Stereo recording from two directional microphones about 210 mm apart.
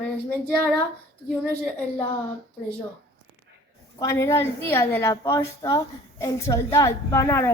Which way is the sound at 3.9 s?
15° left (ahead or behind).